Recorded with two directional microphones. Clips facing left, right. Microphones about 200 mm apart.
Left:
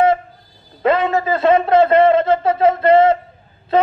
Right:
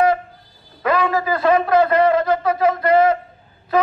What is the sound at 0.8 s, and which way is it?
Speech, 25° left (ahead or behind).